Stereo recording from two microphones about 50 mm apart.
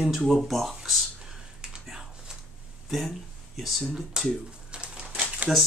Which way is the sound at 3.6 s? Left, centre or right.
Centre.